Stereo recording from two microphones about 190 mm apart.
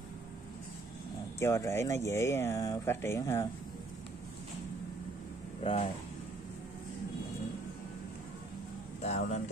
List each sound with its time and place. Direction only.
1.4 s speech: 15° left (ahead or behind)
5.6 s speech: 30° left (ahead or behind)
9.0 s speech: 35° left (ahead or behind)